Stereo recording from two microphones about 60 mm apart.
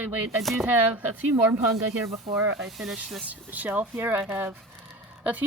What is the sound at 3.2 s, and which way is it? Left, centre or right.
Speech, right.